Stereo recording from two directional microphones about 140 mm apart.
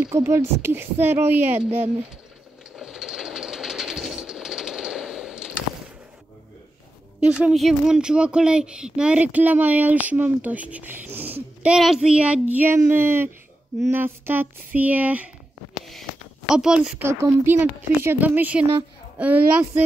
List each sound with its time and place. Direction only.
0.1 s speech: 20° right (ahead or behind)
2.7 s train: 5° right (ahead or behind)
7.2 s speech: 5° right (ahead or behind)
15.9 s a sound: centre (ahead or behind)
17.0 s speech: 20° right (ahead or behind)